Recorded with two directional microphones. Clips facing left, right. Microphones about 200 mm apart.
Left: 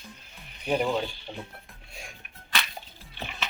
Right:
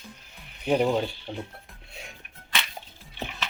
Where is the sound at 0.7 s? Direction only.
15° right (ahead or behind).